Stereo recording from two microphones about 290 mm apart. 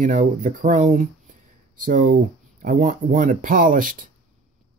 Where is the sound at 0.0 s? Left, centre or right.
Right.